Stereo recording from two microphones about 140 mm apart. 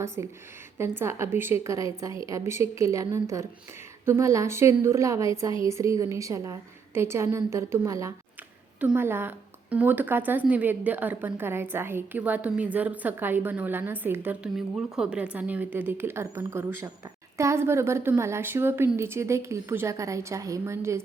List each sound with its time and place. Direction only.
0.2 s a woman's voice: 20° right (ahead or behind)
14.5 s a woman's voice: 5° right (ahead or behind); by 21.0 s 20° right (ahead or behind)